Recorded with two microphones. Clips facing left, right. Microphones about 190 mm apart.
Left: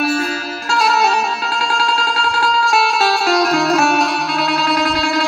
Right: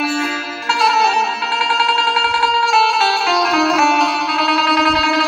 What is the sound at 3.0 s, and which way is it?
Music, 45° left (ahead or behind).